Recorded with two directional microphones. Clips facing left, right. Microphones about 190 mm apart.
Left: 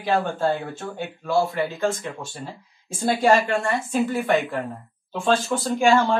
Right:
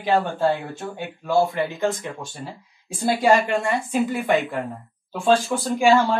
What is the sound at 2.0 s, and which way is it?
A woman's voice, 15° right (ahead or behind).